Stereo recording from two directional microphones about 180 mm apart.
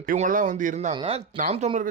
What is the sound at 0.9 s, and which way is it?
Speech, 30° right (ahead or behind).